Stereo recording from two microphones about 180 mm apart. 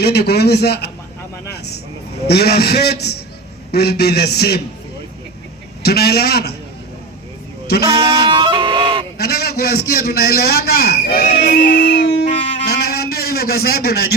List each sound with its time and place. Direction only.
0.0 s a man's voice: 65° left (ahead or behind)
2.2 s a man's voice: 65° left (ahead or behind)
5.8 s a man's voice: 60° left (ahead or behind)
7.7 s a man's voice: 60° left (ahead or behind)
8.3 s fowl: 25° right (ahead or behind)
9.1 s a man's voice: 60° left (ahead or behind)
12.5 s a sound: 60° left (ahead or behind)